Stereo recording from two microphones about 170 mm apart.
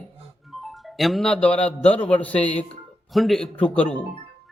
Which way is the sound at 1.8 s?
35° left (ahead or behind).